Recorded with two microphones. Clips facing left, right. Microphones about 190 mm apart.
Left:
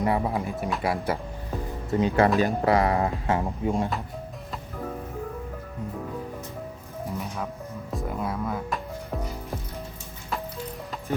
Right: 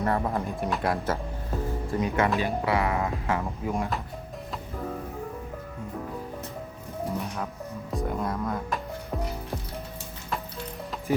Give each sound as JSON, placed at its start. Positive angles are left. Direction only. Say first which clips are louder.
{"t": 0.0, "sound": "speech", "louder": "left 2 dB", "side_deg": 10}
{"t": 1.9, "sound": "speech", "louder": "left 5 dB", "side_deg": 30}
{"t": 2.4, "sound": "speech", "louder": "left 4 dB", "side_deg": 40}
{"t": 7.9, "sound": "speech", "louder": "right 1 dB", "side_deg": 0}